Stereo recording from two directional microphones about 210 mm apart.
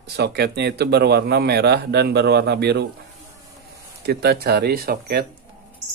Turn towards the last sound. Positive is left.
turn(degrees=-45)  # may be behind; listen again after turning